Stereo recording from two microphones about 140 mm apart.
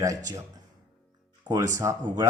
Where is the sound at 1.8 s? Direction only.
20° right (ahead or behind).